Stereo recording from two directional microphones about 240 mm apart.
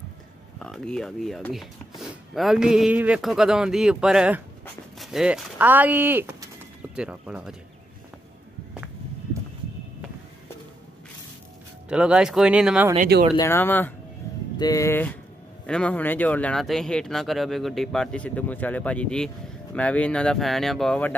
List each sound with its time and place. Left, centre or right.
0.6 s speech: centre
11.9 s speech: centre
12.9 s speech: right
13.4 s speech: centre